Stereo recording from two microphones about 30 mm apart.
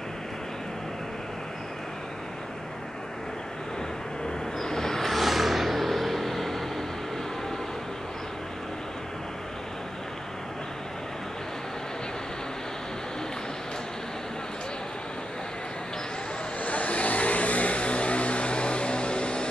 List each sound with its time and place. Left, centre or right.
4.6 s vehicle: centre
5.1 s vehicle: centre
16.6 s vehicle: left